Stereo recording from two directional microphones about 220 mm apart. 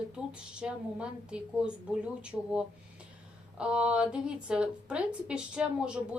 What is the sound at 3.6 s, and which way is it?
A woman's voice, 5° right (ahead or behind).